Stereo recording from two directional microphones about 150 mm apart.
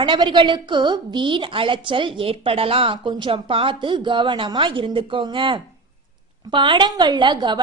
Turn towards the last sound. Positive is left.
turn(degrees=-30)  # may be behind; listen again after turning